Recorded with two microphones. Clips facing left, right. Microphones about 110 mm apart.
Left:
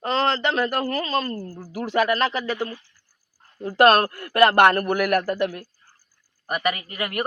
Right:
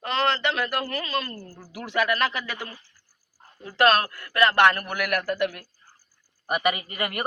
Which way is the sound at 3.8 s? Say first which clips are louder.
Left 4 dB; 45° left (ahead or behind).